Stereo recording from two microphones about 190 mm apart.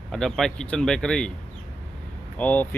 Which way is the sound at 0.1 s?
Centre (ahead or behind).